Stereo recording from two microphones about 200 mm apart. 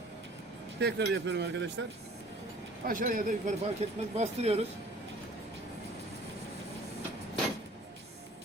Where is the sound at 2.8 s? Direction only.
45° right (ahead or behind).